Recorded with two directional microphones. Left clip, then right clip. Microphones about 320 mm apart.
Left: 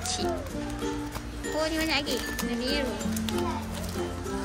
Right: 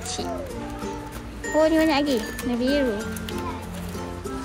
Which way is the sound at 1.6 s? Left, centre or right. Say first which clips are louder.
Right 9 dB; centre.